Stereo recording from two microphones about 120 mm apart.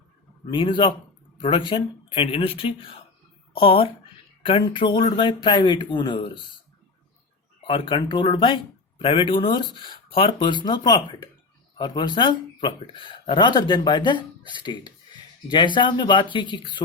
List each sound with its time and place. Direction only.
0.5 s speech: 40° left (ahead or behind)
7.7 s speech: 40° left (ahead or behind)